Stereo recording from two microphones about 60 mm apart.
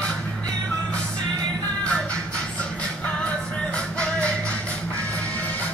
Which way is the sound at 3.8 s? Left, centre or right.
Centre.